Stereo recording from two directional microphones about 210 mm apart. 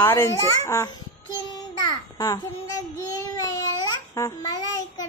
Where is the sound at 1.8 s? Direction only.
20° left (ahead or behind).